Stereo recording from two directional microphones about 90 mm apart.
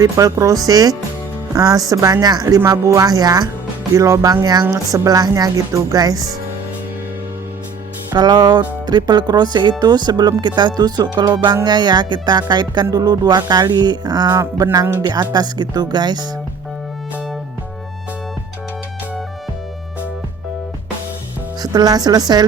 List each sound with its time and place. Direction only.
0.0 s speech: 40° right (ahead or behind)
2.6 s speech: 30° right (ahead or behind)
8.1 s speech: 50° right (ahead or behind)
21.6 s speech: 45° right (ahead or behind)